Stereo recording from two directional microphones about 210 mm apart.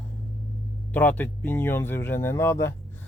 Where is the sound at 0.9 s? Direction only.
10° left (ahead or behind).